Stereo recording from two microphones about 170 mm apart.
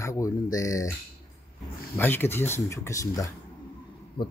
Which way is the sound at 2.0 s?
10° left (ahead or behind).